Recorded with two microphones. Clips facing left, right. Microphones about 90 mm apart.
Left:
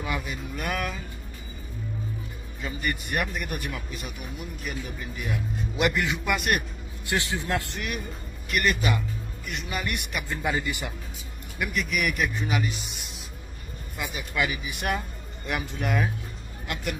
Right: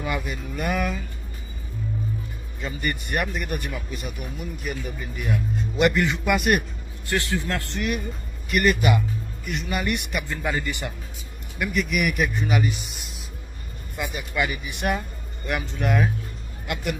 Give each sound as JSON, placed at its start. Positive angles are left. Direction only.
{"t": 0.0, "sound": "a man's voice", "side_deg": 0}
{"t": 2.6, "sound": "a man's voice", "side_deg": 0}
{"t": 7.1, "sound": "a man's voice", "side_deg": 20}
{"t": 7.7, "sound": "a man's voice", "side_deg": 0}